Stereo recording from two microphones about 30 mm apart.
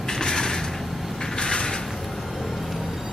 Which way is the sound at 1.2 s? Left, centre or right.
Left.